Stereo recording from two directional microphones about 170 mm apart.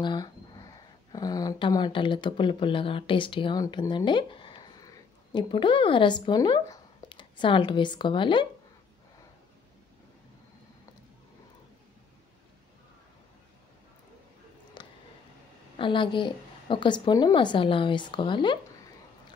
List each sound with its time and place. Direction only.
0.0 s speech: 25° left (ahead or behind)
14.8 s a sound: 30° left (ahead or behind)
15.8 s a woman's voice: 30° left (ahead or behind)